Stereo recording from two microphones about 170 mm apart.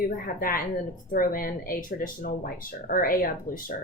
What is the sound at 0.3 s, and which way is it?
Speech, 55° left (ahead or behind).